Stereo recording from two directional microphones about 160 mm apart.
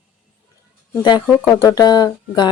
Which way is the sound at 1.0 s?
30° left (ahead or behind).